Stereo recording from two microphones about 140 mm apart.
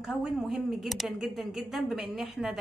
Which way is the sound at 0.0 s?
5° right (ahead or behind).